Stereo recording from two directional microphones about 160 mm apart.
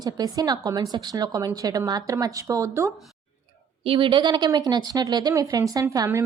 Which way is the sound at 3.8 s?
35° right (ahead or behind).